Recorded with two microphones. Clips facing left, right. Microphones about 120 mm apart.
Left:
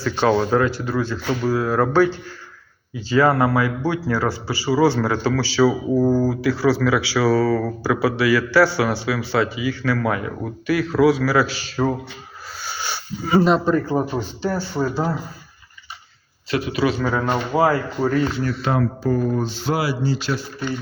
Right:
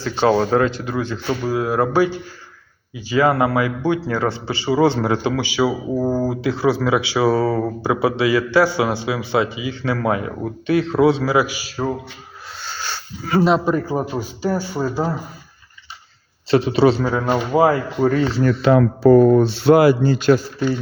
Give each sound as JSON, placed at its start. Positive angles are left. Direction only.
{"t": 0.2, "sound": "a man's voice", "side_deg": -30}
{"t": 0.7, "sound": "a man's voice", "side_deg": -20}
{"t": 12.6, "sound": "a sound", "side_deg": 10}
{"t": 13.4, "sound": "a man's voice", "side_deg": 0}
{"t": 16.5, "sound": "a man's voice", "side_deg": -30}
{"t": 17.0, "sound": "a man's voice", "side_deg": -5}
{"t": 18.0, "sound": "a man's voice", "side_deg": -25}
{"t": 18.6, "sound": "speech", "side_deg": -65}